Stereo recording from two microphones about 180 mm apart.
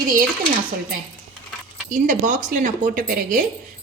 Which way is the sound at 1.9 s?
45° right (ahead or behind).